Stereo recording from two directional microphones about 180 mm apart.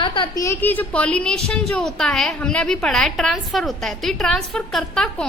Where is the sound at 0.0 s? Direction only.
25° left (ahead or behind).